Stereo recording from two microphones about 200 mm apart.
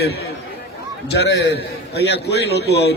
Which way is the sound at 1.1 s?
55° left (ahead or behind).